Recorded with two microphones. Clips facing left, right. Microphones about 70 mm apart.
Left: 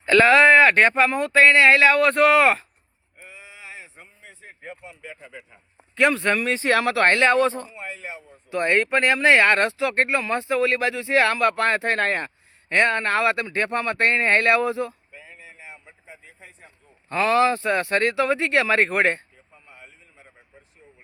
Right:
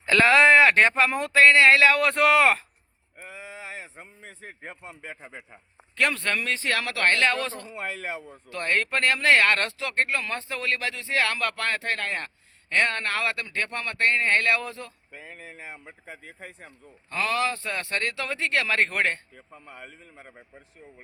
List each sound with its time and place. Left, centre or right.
0.0 s speech: centre
3.2 s a sound: right
6.0 s speech: centre; by 7.7 s left
7.7 s speech: right
8.4 s speech: centre
15.1 s speech: right
17.1 s speech: left
19.6 s speech: right